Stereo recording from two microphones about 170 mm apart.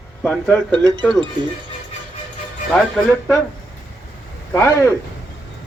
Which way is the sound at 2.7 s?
5° left (ahead or behind).